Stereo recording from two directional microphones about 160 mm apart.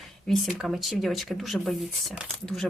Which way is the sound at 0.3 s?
Centre (ahead or behind).